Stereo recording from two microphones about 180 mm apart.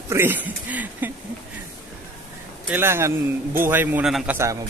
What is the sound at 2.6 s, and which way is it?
Speech, 15° right (ahead or behind).